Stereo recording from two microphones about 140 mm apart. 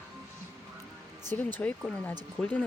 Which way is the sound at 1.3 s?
15° left (ahead or behind).